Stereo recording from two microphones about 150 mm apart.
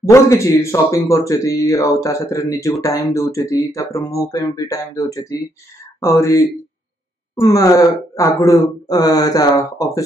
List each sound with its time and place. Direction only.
0.1 s speech: 20° left (ahead or behind)